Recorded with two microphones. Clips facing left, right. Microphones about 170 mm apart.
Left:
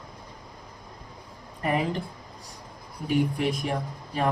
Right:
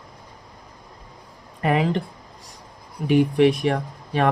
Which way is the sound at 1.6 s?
80° right.